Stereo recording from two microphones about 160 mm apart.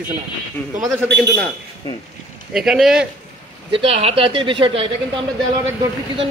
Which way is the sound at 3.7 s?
35° right (ahead or behind).